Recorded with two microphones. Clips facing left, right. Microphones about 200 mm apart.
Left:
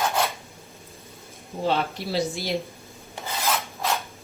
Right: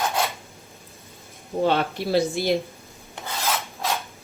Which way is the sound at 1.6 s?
55° right (ahead or behind).